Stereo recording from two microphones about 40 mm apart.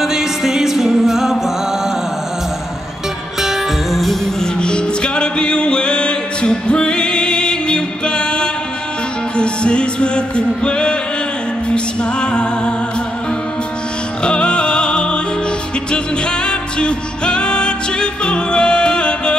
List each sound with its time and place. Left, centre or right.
0.0 s music: centre
3.3 s music: centre
4.4 s music: left
14.2 s music: left